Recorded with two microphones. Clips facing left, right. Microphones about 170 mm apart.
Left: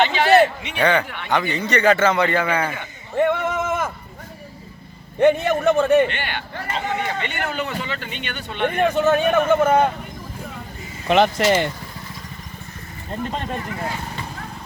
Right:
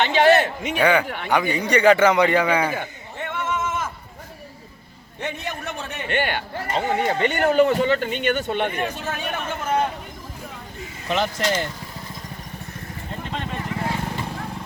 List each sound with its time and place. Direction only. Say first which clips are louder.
0.1 s a sound: left 1 dB; 50° right (ahead or behind)
0.8 s a man's voice: even; 10° right (ahead or behind)
1.0 s a man's voice: right 3 dB; 40° right (ahead or behind)
1.3 s a man's voice: right 1 dB; 10° right (ahead or behind)
3.2 s a sound: left 8 dB; 60° left (ahead or behind)
5.2 s speech: left 14 dB; 60° left (ahead or behind)
6.1 s a man's voice: right 5 dB; 45° right (ahead or behind)
8.6 s speech: left 8 dB; 55° left (ahead or behind)
11.1 s speech: left 6 dB; 70° left (ahead or behind)